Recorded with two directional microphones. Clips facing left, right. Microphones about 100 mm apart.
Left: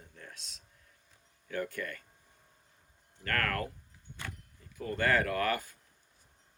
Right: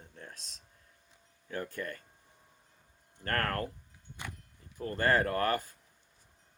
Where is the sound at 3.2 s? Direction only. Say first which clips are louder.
Right 1 dB; 35° right (ahead or behind).